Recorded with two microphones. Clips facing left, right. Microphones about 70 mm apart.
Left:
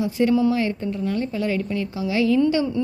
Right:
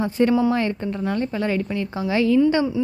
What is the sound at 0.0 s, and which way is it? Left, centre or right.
A woman's voice, right.